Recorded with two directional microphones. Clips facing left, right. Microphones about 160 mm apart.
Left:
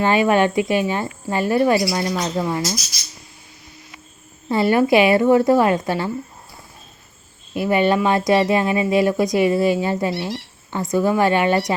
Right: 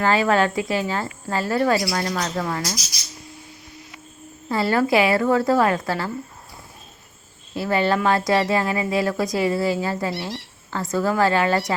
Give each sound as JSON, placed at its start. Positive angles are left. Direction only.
{"t": 0.0, "sound": "speech", "side_deg": 20}
{"t": 4.4, "sound": "speech", "side_deg": 20}
{"t": 7.5, "sound": "speech", "side_deg": 20}